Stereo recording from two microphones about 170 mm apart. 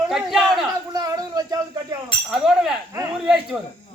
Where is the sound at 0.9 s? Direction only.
20° right (ahead or behind).